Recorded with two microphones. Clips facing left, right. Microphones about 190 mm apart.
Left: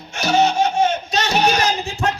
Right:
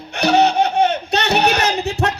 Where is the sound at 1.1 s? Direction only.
60° right (ahead or behind).